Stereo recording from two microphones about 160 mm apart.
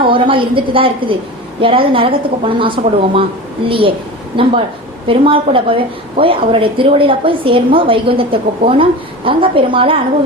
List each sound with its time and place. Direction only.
0.0 s a woman's voice: 35° right (ahead or behind)